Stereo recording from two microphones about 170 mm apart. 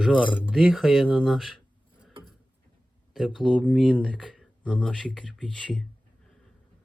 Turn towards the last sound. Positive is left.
turn(degrees=5)  # may be behind; listen again after turning